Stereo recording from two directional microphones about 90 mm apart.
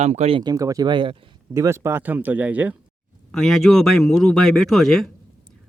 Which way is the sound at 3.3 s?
5° left (ahead or behind).